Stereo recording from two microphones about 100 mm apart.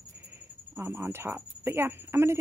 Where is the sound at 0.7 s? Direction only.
25° right (ahead or behind).